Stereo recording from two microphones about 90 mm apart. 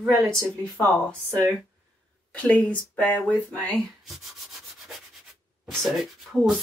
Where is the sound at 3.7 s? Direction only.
Centre (ahead or behind).